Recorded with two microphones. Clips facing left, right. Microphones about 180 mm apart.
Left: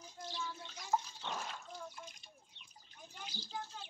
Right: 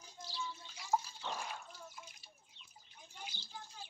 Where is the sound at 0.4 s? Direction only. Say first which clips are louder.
Right 1 dB; 75° left (ahead or behind).